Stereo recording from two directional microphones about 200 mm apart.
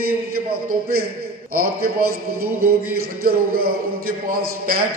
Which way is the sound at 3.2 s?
50° right (ahead or behind).